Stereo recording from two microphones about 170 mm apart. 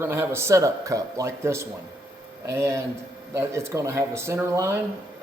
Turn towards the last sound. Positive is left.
turn(degrees=-15)  # may be behind; listen again after turning